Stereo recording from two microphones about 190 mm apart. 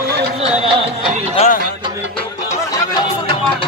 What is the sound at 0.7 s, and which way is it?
Music, 30° right (ahead or behind).